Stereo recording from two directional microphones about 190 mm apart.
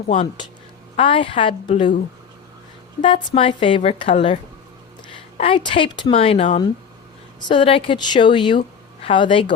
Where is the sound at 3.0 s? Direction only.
25° left (ahead or behind).